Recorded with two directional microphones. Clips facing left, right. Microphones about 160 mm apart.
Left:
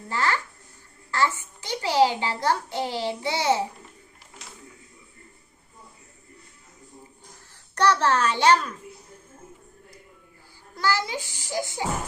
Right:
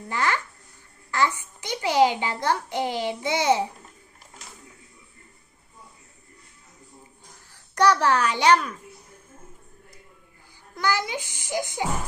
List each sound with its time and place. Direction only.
0.1 s a child's voice: 20° right (ahead or behind)
7.8 s a child's voice: 10° right (ahead or behind)
10.8 s a child's voice: 20° right (ahead or behind)